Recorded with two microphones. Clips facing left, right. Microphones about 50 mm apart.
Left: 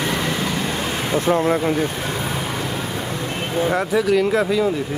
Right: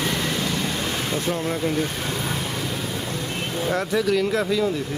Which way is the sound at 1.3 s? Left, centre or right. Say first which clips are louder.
Left 6 dB; left.